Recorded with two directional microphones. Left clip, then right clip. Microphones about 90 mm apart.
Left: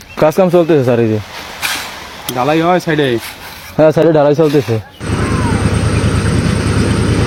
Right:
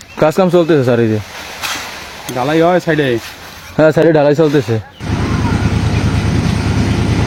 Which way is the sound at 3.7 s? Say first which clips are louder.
Even; 20° right (ahead or behind).